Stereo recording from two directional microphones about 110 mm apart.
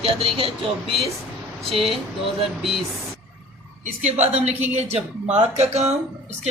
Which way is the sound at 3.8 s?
85° right.